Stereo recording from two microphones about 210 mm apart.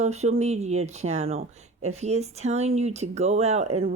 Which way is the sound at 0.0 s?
30° right (ahead or behind).